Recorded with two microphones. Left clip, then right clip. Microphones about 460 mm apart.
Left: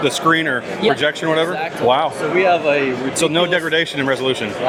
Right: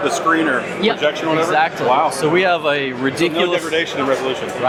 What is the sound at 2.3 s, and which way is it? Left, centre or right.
Speech, right.